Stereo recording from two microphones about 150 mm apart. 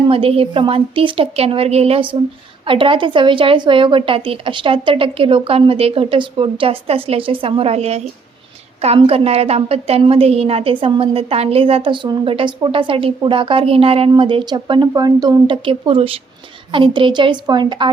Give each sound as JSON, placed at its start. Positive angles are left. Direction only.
{"t": 0.0, "sound": "a woman's voice", "side_deg": -40}